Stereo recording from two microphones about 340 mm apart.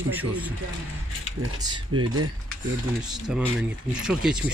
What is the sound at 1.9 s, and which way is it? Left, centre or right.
Speech, right.